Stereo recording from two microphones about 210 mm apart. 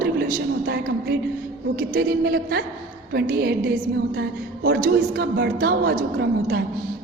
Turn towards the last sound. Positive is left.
turn(degrees=-50)  # may be behind; listen again after turning